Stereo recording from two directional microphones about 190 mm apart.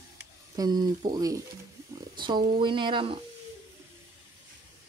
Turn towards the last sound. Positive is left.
turn(degrees=-25)  # may be behind; listen again after turning